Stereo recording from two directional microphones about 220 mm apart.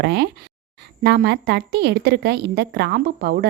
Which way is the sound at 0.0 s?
50° right (ahead or behind).